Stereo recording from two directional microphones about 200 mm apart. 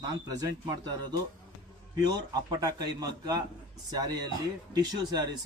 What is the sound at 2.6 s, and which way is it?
Speech, 20° right (ahead or behind).